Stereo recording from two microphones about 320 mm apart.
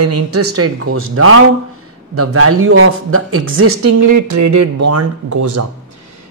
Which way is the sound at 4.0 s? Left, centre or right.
Right.